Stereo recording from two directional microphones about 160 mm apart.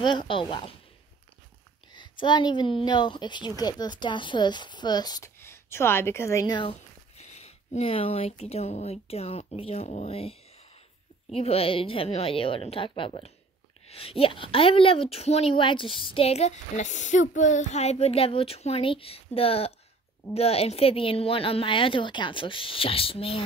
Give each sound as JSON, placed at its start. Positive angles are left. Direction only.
{"t": 0.0, "sound": "a woman's voice", "side_deg": 30}
{"t": 2.0, "sound": "a woman's voice", "side_deg": 30}
{"t": 7.2, "sound": "speech", "side_deg": 40}
{"t": 11.3, "sound": "a woman's voice", "side_deg": 35}